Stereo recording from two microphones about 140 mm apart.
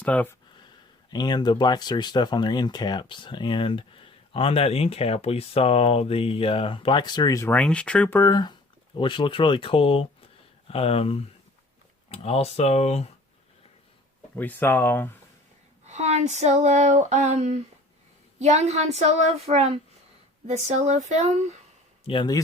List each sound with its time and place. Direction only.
0.0 s speech: 10° left (ahead or behind)
1.1 s speech: 30° left (ahead or behind)
7.5 s speech: 10° left (ahead or behind)
8.2 s speech: 30° left (ahead or behind); by 13.1 s 50° left (ahead or behind)
14.3 s speech: 15° left (ahead or behind)
15.9 s female singing: 55° right (ahead or behind)
18.4 s speech: 50° right (ahead or behind)
22.0 s speech: 35° left (ahead or behind)